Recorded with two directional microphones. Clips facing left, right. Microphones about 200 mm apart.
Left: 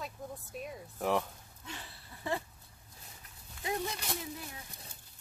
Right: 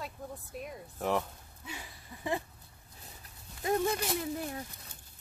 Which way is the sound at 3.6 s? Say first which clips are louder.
Right 7 dB; 45° right (ahead or behind).